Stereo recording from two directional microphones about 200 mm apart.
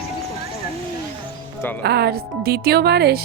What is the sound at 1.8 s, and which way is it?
Speech, 55° right (ahead or behind).